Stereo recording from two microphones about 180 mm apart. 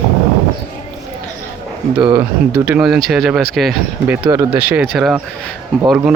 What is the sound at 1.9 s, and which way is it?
Speech, 25° right (ahead or behind).